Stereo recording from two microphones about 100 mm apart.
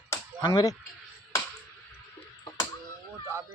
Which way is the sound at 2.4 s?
40° left (ahead or behind).